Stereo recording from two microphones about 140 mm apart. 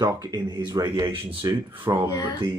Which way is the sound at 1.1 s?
40° right (ahead or behind).